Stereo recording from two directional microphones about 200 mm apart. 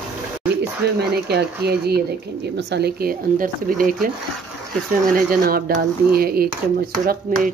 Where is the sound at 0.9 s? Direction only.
55° right (ahead or behind).